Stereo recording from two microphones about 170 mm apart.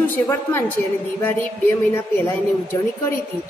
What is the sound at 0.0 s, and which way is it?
Speech, 15° left (ahead or behind).